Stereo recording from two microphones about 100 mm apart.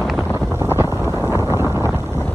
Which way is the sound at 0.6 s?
25° right (ahead or behind).